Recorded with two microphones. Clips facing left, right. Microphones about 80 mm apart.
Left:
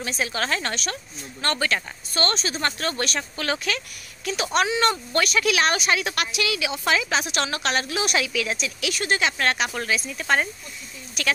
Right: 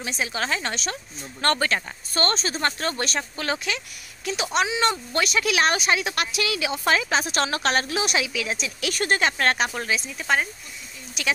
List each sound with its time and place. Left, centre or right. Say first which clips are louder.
0.0 s a woman's voice: left 1 dB; centre
1.4 s speech: right 2 dB; right
8.0 s speech: left 1 dB; centre
8.9 s speech: right 2 dB; right
9.8 s speech: left 1 dB; right
10.1 s speech: left 1 dB; centre